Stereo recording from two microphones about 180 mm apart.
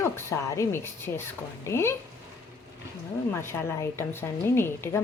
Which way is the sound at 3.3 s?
15° left (ahead or behind).